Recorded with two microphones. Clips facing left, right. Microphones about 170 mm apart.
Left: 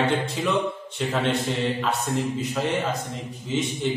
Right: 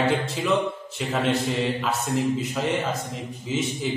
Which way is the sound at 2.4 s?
Centre (ahead or behind).